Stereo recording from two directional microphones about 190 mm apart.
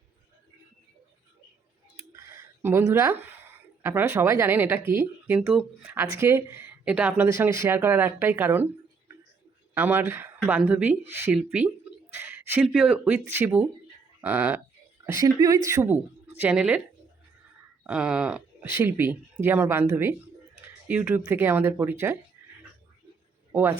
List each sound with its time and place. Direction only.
2.1 s a sound: 10° right (ahead or behind)
3.8 s speech: 15° right (ahead or behind)
9.7 s speech: 10° right (ahead or behind)
15.2 s speech: 20° right (ahead or behind)
17.8 s speech: 5° right (ahead or behind)
23.5 s a man's voice: 10° right (ahead or behind)